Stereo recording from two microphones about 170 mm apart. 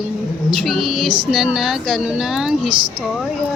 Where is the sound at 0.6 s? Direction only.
Centre (ahead or behind).